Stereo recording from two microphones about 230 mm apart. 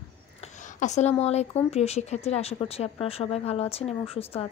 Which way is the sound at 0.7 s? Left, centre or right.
Left.